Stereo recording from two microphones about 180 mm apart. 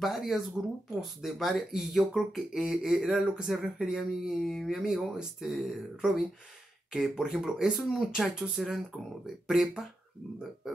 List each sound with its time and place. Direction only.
0.0 s speech: centre (ahead or behind)